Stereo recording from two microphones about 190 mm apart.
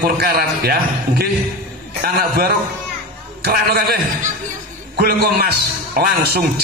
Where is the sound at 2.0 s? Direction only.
55° right (ahead or behind).